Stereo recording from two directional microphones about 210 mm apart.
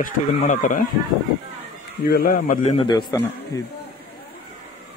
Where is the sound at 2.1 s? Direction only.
45° left (ahead or behind).